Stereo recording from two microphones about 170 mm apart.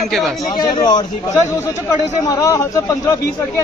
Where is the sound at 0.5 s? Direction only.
25° left (ahead or behind).